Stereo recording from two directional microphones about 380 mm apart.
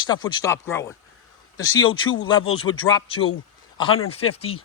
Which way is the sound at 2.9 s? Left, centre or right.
Centre.